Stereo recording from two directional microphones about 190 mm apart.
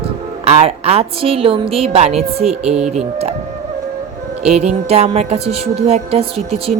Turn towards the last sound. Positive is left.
turn(degrees=-30)  # may be behind; listen again after turning